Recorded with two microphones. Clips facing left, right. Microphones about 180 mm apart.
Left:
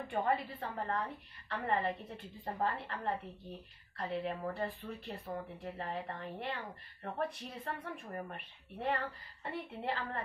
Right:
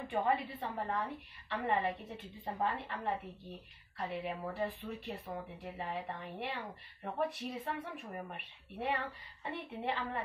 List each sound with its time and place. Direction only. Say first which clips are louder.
0.1 s a woman's voice: right 1 dB; centre (ahead or behind)
4.2 s a woman's voice: right 1 dB; 5° right (ahead or behind)